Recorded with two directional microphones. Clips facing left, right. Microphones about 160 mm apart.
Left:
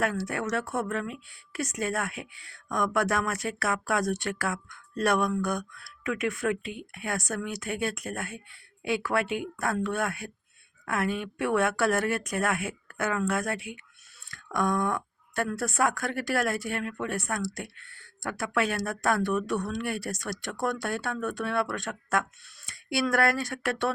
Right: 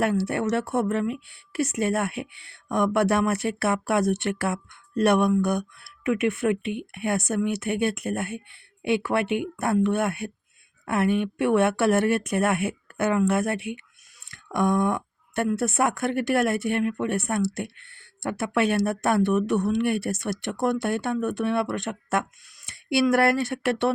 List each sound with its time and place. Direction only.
0.0 s speech: 30° right (ahead or behind)